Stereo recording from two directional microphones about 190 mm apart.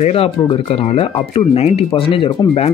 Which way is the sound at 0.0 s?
30° left (ahead or behind).